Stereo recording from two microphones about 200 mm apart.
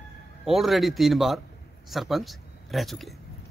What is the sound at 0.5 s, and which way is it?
Speech, centre (ahead or behind).